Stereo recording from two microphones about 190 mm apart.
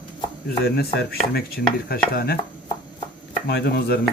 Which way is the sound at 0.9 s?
55° left (ahead or behind).